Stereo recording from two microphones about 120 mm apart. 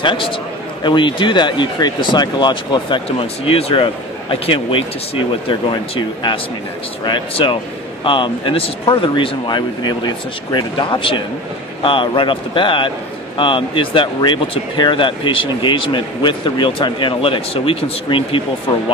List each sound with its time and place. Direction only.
0.0 s speech: 45° left (ahead or behind)
3.1 s speech: 55° left (ahead or behind)